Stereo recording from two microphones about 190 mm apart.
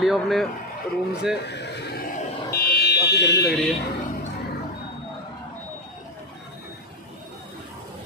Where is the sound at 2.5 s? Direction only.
55° left (ahead or behind).